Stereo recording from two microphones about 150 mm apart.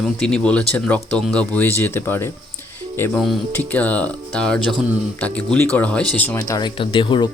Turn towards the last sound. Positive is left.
turn(degrees=30)  # may be behind; listen again after turning